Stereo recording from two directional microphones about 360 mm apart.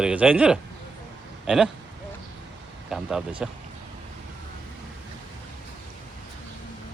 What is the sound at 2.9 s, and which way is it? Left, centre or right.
Speech, centre.